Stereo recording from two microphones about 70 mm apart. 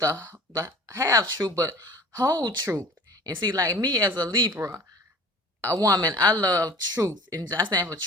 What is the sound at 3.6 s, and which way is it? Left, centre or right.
Speech, right.